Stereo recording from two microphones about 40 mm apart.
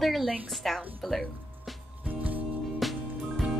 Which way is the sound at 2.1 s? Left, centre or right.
Right.